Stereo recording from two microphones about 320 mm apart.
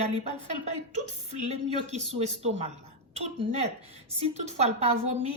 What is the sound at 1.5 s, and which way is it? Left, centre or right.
Speech, centre.